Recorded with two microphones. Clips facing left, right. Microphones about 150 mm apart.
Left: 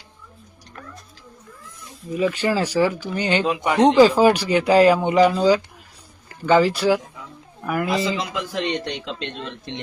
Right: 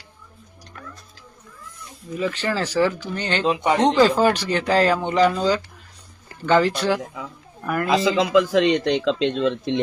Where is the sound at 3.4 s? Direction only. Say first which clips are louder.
Right 2 dB; 30° right (ahead or behind).